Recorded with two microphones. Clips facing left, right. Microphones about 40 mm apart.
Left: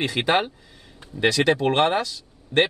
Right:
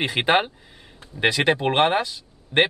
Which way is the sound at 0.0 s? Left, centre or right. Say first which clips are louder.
Right 1 dB; right.